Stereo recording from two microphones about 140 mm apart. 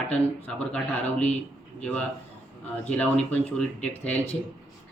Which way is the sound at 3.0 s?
10° left (ahead or behind).